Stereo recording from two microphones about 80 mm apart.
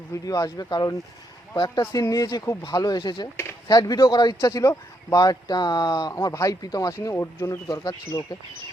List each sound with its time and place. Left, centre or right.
0.1 s speech: left
1.5 s speech: left
1.9 s speech: left
4.4 s speech: left
6.2 s speech: left
7.0 s speech: left